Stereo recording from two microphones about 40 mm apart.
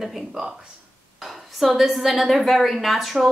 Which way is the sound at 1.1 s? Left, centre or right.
Centre.